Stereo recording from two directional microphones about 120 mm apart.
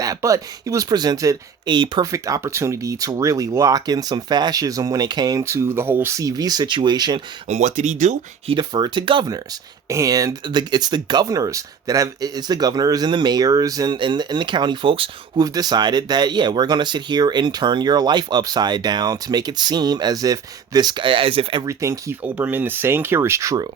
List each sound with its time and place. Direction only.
0.0 s speech: 30° right (ahead or behind)
2.1 s speech: 25° right (ahead or behind)
7.4 s speech: 80° right
8.4 s speech: 40° right (ahead or behind)
9.9 s speech: 30° right (ahead or behind); by 15.1 s 45° right (ahead or behind)
15.4 s speech: 35° right (ahead or behind)
21.6 s speech: 25° right (ahead or behind)
22.2 s speech: 15° right (ahead or behind)